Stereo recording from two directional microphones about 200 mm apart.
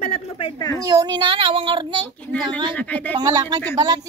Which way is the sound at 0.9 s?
20° right (ahead or behind).